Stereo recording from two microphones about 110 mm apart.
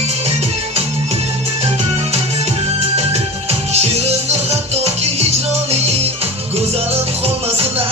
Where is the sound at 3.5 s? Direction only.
75° right (ahead or behind).